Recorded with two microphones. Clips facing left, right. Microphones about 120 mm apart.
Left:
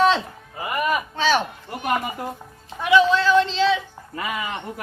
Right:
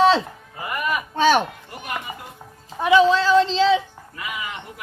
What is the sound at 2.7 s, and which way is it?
A man's voice, 35° right (ahead or behind).